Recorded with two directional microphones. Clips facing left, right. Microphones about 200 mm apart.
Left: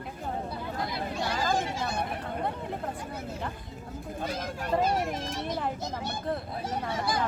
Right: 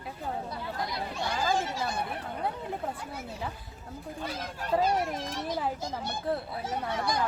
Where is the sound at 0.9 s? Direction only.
5° left (ahead or behind).